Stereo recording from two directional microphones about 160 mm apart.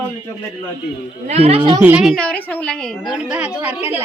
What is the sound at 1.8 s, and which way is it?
Speech, 10° right (ahead or behind).